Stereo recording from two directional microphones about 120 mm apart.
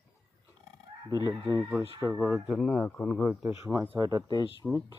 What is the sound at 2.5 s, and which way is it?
Speech, centre (ahead or behind).